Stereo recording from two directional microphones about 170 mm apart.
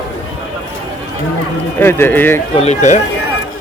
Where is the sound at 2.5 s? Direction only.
40° left (ahead or behind).